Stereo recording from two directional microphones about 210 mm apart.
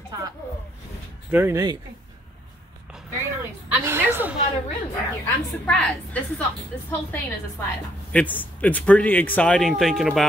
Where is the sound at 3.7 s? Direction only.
10° right (ahead or behind).